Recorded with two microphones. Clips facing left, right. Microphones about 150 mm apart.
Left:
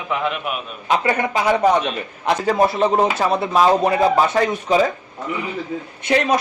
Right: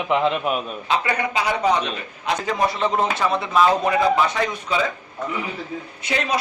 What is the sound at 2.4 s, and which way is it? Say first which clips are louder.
Speech: left 6 dB; 40° left (ahead or behind).